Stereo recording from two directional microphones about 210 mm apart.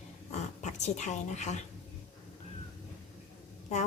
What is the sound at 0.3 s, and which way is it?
Speech, 35° left (ahead or behind).